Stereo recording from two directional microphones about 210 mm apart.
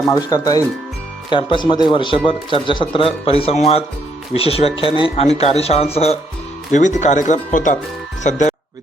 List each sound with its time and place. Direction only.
0.1 s speech: 15° left (ahead or behind); by 8.5 s 35° left (ahead or behind)